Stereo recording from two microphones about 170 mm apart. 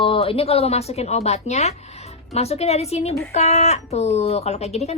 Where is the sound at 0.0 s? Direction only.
35° left (ahead or behind).